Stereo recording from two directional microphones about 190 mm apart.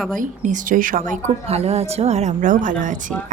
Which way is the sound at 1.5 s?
35° right (ahead or behind).